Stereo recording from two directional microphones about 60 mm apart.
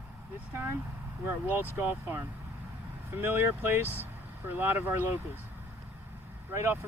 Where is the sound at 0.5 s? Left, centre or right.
Right.